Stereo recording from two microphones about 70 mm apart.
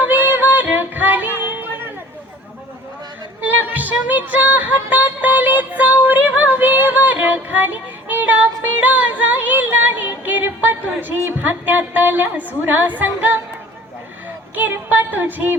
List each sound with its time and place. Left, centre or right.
0.0 s music: right
3.4 s music: right
14.5 s a sound: right